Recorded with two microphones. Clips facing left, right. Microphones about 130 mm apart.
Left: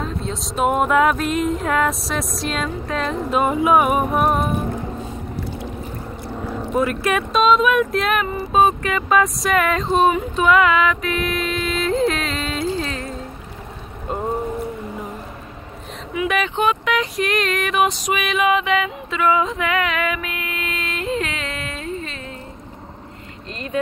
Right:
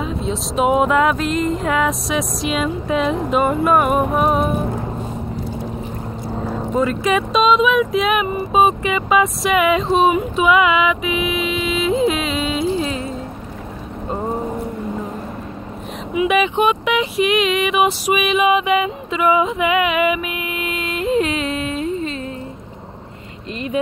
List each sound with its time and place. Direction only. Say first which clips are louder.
0.0 s speech: right 4 dB; centre (ahead or behind)
6.7 s speech: right 2 dB; 5° left (ahead or behind)
10.3 s music: right 1 dB; 10° right (ahead or behind)
14.0 s boat: right 1 dB; centre (ahead or behind)
16.1 s vehicle: right 5 dB; 20° right (ahead or behind)
16.3 s a sound: right 2 dB; 10° right (ahead or behind)